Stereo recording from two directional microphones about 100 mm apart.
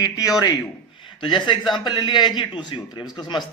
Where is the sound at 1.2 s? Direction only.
55° left (ahead or behind).